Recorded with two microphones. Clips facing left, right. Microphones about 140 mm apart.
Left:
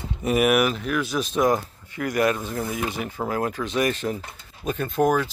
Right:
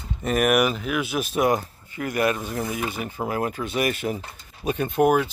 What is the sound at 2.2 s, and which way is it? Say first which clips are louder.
Speech: left 1 dB; 15° right (ahead or behind).